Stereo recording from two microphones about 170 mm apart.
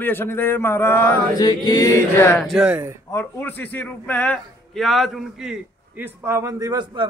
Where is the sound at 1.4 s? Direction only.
25° left (ahead or behind).